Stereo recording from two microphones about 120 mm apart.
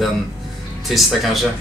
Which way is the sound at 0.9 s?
Centre (ahead or behind).